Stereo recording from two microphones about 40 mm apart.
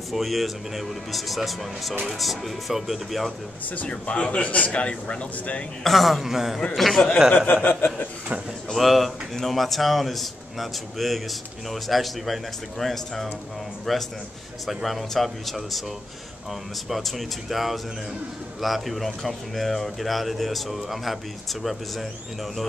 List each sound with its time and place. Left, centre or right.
0.1 s speech: centre
3.9 s a man's voice: left
5.9 s a man's voice: centre
7.3 s speech: left
8.7 s speech: centre
16.9 s speech: centre